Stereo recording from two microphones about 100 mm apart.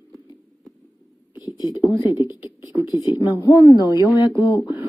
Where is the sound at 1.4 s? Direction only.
40° left (ahead or behind).